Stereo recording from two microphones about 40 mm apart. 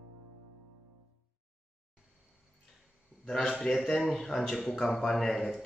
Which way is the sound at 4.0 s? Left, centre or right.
Centre.